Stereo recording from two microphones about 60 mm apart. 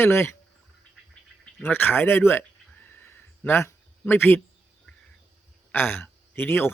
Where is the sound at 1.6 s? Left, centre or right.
Left.